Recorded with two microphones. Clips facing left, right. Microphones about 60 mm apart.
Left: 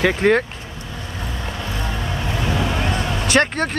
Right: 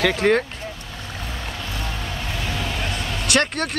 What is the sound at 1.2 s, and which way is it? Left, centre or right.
Vehicle, left.